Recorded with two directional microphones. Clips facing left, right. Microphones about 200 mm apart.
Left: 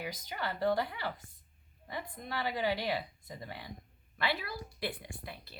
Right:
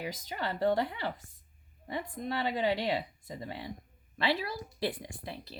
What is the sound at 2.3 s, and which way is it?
Speech, 25° right (ahead or behind).